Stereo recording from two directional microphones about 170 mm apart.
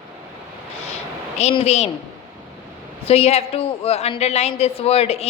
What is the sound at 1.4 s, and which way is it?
Speech, 40° left (ahead or behind).